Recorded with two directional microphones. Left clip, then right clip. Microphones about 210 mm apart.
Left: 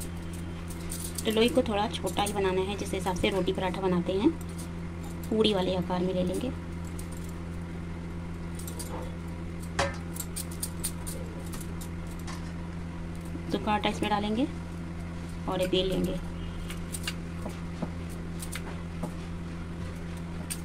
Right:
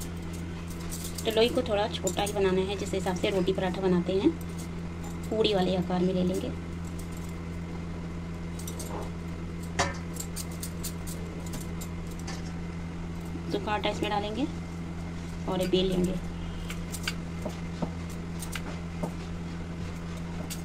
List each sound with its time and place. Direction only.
1.2 s speech: 30° left (ahead or behind)
5.4 s speech: 35° left (ahead or behind)
13.5 s a sound: 35° left (ahead or behind)
15.5 s speech: 40° left (ahead or behind)